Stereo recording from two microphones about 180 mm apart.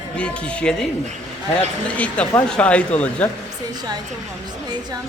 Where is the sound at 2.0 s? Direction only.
5° left (ahead or behind).